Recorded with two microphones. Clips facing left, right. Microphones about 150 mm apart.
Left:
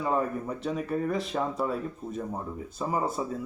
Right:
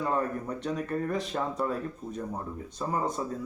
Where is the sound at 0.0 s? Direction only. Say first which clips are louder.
Left 1 dB; 5° left (ahead or behind).